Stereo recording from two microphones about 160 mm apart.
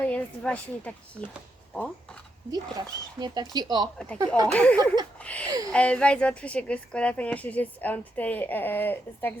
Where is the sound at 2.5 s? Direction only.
25° right (ahead or behind).